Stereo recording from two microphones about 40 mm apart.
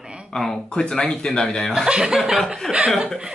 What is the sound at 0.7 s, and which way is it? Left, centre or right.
Speech, left.